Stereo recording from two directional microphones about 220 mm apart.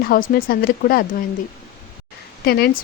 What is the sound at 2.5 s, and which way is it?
Speech, 45° left (ahead or behind).